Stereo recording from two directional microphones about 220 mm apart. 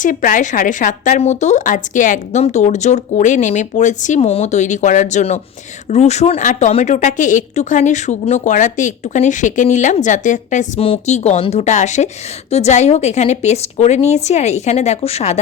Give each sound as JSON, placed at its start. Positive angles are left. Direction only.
{"t": 0.0, "sound": "a woman's voice", "side_deg": 35}